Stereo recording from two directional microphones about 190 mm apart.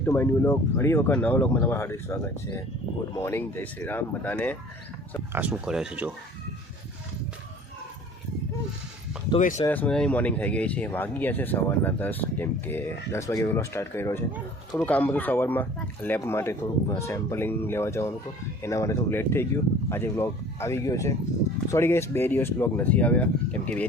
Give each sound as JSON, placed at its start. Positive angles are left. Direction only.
{"t": 0.0, "sound": "speech", "side_deg": 10}
{"t": 5.3, "sound": "speech", "side_deg": -5}
{"t": 9.4, "sound": "speech", "side_deg": 40}
{"t": 9.6, "sound": "speech", "side_deg": 10}